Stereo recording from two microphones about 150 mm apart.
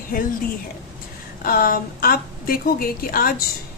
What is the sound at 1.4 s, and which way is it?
A woman's voice, 70° left (ahead or behind).